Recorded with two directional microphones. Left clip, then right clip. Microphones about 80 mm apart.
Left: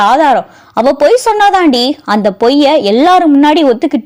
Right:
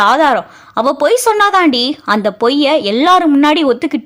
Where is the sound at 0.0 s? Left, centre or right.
Centre.